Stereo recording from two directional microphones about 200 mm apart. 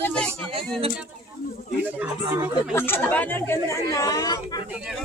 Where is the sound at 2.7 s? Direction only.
10° left (ahead or behind).